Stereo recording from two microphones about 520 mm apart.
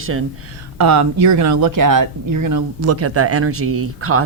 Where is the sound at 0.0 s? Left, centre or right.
Right.